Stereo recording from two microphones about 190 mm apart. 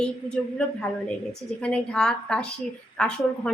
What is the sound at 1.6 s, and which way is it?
A woman's voice, 5° left (ahead or behind).